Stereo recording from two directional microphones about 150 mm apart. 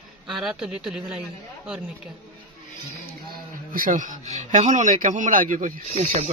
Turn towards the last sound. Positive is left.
turn(degrees=-55)  # may be behind; listen again after turning